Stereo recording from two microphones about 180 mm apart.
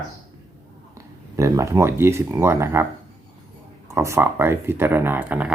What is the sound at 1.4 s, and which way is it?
Speech, 15° right (ahead or behind).